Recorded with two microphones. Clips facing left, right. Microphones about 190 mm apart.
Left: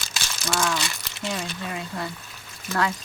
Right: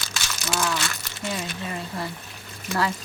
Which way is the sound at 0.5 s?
5° right (ahead or behind).